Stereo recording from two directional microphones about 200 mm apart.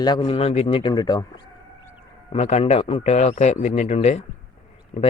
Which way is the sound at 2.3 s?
30° left (ahead or behind).